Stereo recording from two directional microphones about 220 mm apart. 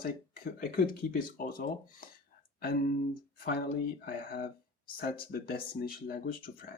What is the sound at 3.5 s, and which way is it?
Speech, 45° left (ahead or behind).